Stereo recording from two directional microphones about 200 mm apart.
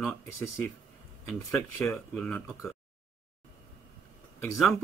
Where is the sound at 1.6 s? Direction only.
10° left (ahead or behind).